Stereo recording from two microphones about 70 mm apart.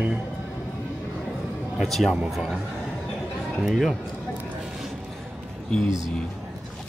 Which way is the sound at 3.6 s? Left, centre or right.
Centre.